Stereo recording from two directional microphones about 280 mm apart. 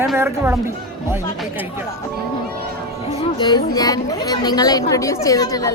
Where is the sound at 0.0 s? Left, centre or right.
Centre.